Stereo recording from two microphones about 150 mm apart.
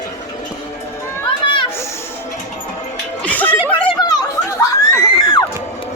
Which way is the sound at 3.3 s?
10° left (ahead or behind).